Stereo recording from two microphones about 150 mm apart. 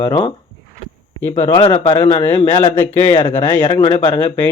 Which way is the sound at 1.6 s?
40° left (ahead or behind).